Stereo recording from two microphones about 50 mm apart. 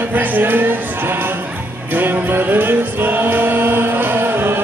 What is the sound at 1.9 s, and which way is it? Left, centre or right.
Music, right.